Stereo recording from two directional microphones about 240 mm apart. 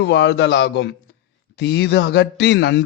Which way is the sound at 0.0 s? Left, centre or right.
Left.